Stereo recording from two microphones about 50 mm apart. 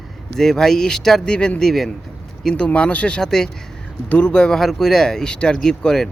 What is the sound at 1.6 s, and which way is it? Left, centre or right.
Speech, centre.